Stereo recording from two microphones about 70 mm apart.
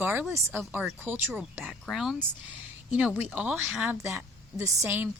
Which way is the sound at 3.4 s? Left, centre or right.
Centre.